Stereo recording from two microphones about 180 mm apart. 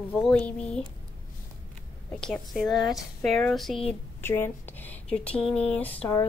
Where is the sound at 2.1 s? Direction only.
5° left (ahead or behind).